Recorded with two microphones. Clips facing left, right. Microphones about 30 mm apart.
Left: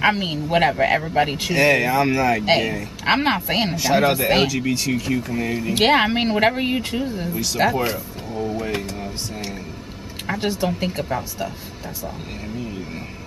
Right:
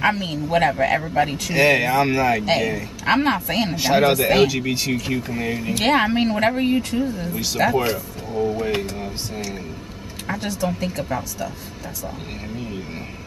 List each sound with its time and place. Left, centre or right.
0.0 s speech: left
1.5 s speech: centre
2.4 s speech: centre
3.7 s speech: centre
4.1 s speech: centre
4.5 s speech: centre
5.8 s speech: left
7.5 s speech: centre
10.4 s speech: left